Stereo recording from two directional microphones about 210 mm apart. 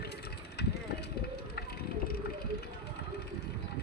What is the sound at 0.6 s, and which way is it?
Vehicle, 50° left (ahead or behind).